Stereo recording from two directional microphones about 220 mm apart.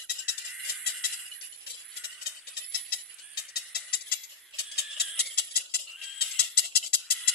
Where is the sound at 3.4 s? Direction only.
45° left (ahead or behind).